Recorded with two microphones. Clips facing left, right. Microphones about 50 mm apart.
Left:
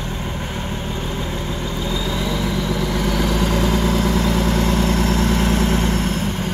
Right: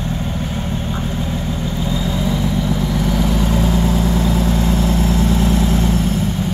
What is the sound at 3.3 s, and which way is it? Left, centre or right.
Vehicle, left.